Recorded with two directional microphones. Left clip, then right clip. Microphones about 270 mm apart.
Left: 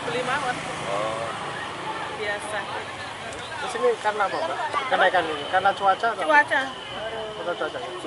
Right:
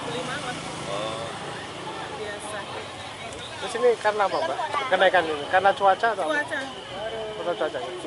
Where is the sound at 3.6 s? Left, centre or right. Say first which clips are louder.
Right 2 dB; centre.